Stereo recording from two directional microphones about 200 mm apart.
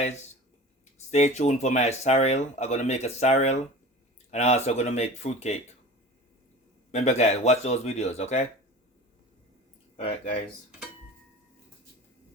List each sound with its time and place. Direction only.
0.9 s speech: 35° left (ahead or behind)
6.9 s speech: 35° left (ahead or behind)
10.0 s speech: 30° left (ahead or behind)